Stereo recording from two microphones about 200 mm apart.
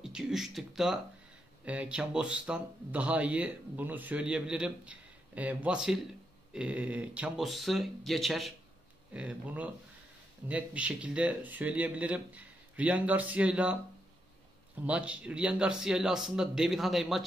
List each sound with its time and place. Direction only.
0.0 s a man's voice: 5° right (ahead or behind)
14.9 s a man's voice: 5° right (ahead or behind)